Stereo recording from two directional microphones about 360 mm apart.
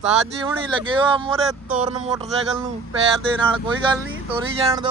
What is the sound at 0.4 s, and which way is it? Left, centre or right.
Speech, centre.